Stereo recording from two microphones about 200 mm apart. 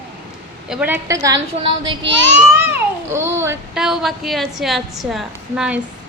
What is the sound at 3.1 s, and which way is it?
Speech, 15° right (ahead or behind).